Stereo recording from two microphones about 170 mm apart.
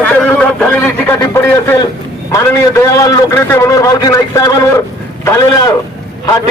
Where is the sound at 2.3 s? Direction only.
20° left (ahead or behind).